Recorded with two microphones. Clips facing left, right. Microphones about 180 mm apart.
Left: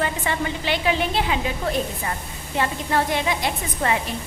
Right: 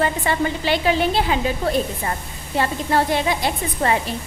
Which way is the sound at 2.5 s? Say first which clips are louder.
Right 3 dB; 35° right (ahead or behind).